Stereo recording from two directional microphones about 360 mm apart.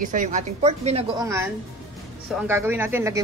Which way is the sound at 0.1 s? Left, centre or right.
Right.